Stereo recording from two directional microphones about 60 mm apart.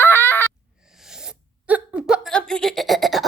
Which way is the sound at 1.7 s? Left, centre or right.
Centre.